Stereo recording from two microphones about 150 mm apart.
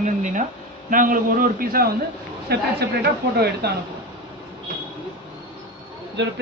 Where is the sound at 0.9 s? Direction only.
65° right (ahead or behind).